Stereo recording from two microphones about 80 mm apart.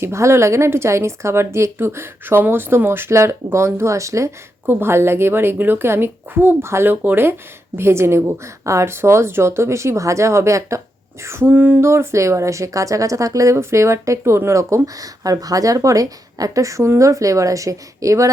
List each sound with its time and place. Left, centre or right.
0.0 s speech: right
4.6 s a woman's voice: right
11.8 s speech: right